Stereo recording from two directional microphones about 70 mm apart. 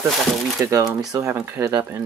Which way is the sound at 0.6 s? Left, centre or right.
Right.